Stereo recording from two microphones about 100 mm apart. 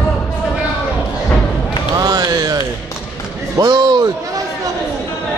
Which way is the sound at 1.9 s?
40° right (ahead or behind).